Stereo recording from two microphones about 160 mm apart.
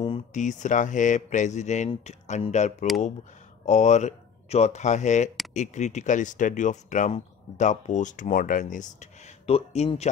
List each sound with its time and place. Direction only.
0.3 s speech: 50° left (ahead or behind)
9.5 s speech: 40° left (ahead or behind)